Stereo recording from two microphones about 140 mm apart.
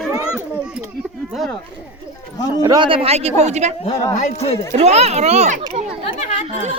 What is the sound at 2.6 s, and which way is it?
A child's voice, 35° right (ahead or behind).